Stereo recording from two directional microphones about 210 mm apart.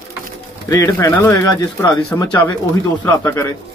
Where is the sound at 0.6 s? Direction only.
15° left (ahead or behind).